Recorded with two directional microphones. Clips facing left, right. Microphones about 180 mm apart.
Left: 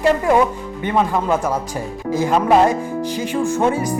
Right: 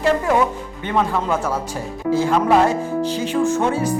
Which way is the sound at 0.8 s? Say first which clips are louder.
Left 2 dB; 15° left (ahead or behind).